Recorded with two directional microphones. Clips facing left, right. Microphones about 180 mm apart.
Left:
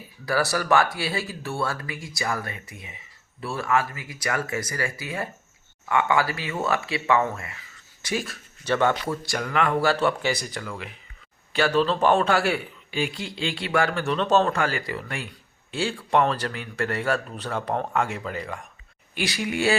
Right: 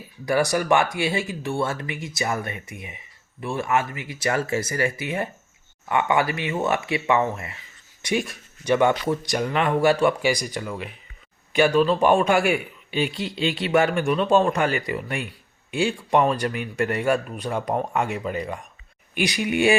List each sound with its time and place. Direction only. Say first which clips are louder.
0.3 s a man's voice: right 3 dB; 20° right (ahead or behind)